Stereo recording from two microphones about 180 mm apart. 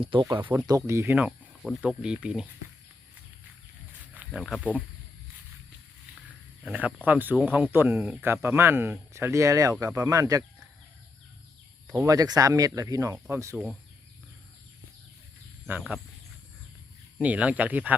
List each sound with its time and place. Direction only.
0.0 s speech: 25° right (ahead or behind); by 2.5 s 5° right (ahead or behind)
4.1 s speech: 5° right (ahead or behind)
6.7 s speech: 10° right (ahead or behind)
12.0 s speech: 20° right (ahead or behind)
17.2 s speech: 10° right (ahead or behind)